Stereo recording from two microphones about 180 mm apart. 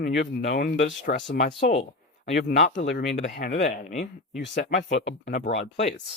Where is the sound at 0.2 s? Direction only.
45° left (ahead or behind).